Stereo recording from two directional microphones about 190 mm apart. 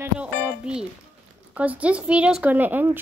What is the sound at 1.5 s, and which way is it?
Speech, 5° right (ahead or behind).